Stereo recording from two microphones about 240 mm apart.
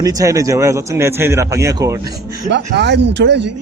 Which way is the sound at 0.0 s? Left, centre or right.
Centre.